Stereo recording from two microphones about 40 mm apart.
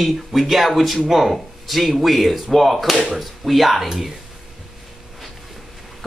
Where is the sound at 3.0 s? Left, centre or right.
Centre.